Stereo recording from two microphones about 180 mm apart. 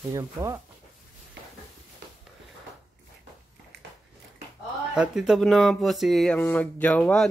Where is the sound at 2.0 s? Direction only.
70° right (ahead or behind).